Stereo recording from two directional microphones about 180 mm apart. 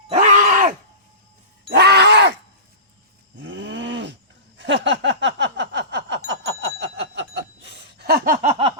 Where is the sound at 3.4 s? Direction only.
90° right.